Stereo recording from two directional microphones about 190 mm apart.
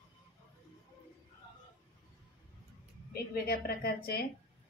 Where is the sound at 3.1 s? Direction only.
55° left (ahead or behind).